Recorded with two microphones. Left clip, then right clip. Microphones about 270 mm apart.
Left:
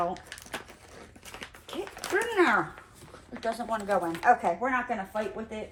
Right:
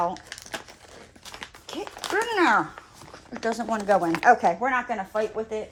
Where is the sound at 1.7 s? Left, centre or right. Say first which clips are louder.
Right 4 dB; centre.